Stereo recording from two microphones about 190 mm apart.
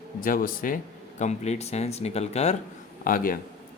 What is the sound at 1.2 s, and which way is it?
Speech, 35° left (ahead or behind).